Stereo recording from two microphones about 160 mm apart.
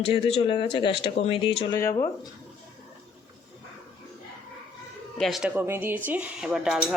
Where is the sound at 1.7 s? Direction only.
20° left (ahead or behind).